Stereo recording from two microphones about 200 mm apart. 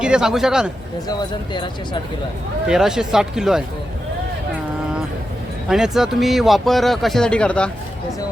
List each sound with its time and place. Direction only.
0.0 s speech: 5° right (ahead or behind)
1.0 s speech: 20° left (ahead or behind)
2.6 s speech: 5° right (ahead or behind)
5.6 s speech: centre (ahead or behind)